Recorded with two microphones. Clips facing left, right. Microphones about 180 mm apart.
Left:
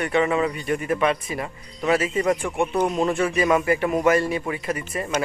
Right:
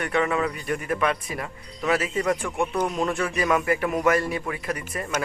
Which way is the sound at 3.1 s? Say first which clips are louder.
Left 4 dB; centre (ahead or behind).